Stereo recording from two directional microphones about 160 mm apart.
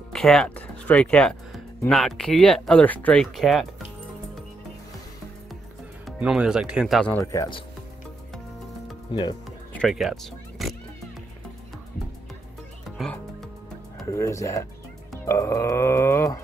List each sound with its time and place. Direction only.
0.1 s speech: centre (ahead or behind)
6.0 s speech: 5° right (ahead or behind)
7.1 s speech: 15° left (ahead or behind)
9.1 s speech: 25° left (ahead or behind)
9.7 s speech: 5° left (ahead or behind)
14.0 s speech: 20° left (ahead or behind)
15.2 s dog: 15° left (ahead or behind)